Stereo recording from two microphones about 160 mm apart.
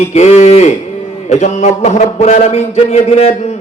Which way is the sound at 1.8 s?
45° left (ahead or behind).